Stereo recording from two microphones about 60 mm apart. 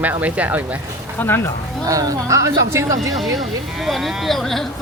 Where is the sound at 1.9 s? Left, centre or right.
Right.